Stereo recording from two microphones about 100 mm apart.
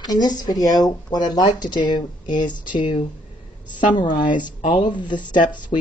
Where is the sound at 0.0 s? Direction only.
45° left (ahead or behind).